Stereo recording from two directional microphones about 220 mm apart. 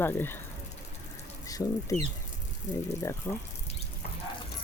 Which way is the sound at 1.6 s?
15° left (ahead or behind).